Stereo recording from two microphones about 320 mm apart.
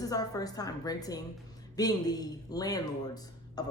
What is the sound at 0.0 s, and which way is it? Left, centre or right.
Speech, centre.